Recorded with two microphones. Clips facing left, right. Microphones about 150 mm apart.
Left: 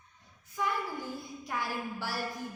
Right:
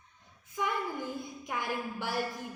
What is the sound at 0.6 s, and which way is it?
A woman's voice, 20° right (ahead or behind).